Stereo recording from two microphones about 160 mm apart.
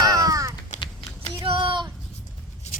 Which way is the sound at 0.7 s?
50° left (ahead or behind).